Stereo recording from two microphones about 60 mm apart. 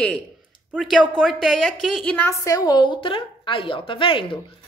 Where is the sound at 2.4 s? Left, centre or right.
Left.